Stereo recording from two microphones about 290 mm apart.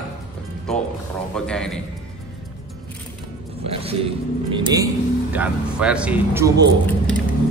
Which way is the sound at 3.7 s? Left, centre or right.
Centre.